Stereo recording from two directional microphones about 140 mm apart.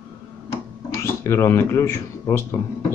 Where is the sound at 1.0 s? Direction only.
20° left (ahead or behind).